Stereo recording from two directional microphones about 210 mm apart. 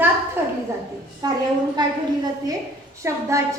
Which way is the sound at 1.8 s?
20° right (ahead or behind).